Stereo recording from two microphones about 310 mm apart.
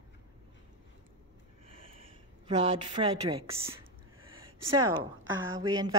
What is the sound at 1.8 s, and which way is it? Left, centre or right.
A woman's voice, centre.